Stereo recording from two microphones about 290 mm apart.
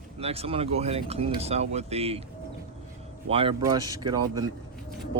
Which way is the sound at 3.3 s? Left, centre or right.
Centre.